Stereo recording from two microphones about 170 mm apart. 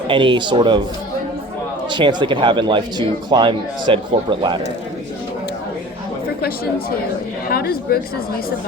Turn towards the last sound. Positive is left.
turn(degrees=65)  # may be behind; listen again after turning